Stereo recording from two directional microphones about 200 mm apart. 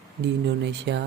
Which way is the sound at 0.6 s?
60° right (ahead or behind).